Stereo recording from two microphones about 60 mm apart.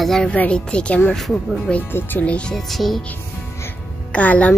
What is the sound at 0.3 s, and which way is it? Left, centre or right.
Speech, centre.